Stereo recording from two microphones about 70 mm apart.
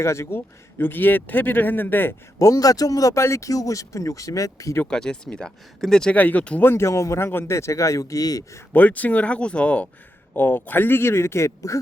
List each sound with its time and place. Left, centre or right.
0.0 s speech: left
2.4 s speech: left
4.9 s speech: centre
6.1 s speech: left
6.7 s speech: left
8.7 s speech: left
10.3 s speech: left